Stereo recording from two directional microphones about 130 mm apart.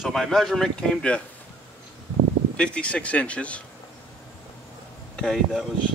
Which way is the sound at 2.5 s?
10° left (ahead or behind).